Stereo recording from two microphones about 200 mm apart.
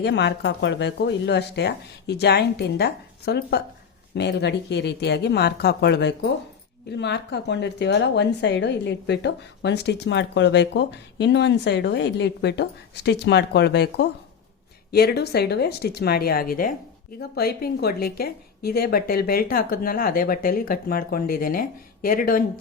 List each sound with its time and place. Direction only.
0.0 s a woman's voice: 60° left (ahead or behind)